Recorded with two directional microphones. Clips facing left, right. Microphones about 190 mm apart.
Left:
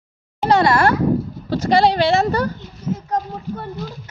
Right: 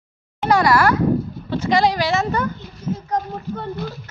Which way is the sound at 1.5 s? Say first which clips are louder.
Left 2 dB; 35° left (ahead or behind).